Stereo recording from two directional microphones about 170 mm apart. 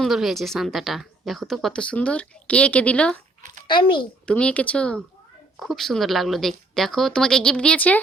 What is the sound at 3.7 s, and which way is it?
Speech, 30° left (ahead or behind).